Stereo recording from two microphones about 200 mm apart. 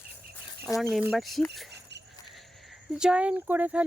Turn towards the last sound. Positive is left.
turn(degrees=-10)  # may be behind; listen again after turning